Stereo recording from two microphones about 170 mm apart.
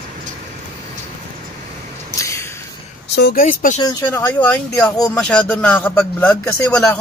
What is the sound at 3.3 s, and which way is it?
Speech, 55° left (ahead or behind).